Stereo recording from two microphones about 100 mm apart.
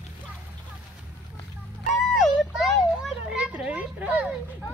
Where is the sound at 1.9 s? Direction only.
5° right (ahead or behind).